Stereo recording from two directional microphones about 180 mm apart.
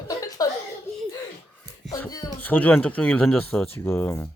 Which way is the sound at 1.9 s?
20° left (ahead or behind).